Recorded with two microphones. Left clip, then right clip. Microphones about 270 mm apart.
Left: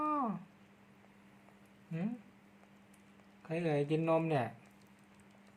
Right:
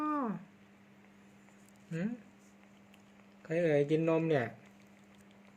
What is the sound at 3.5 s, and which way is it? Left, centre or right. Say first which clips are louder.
Speech: right 5 dB; centre.